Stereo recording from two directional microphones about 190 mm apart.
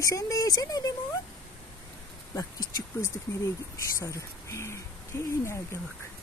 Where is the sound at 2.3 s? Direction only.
15° left (ahead or behind).